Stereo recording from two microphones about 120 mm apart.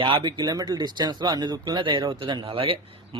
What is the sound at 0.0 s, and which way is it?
Speech, 40° right (ahead or behind).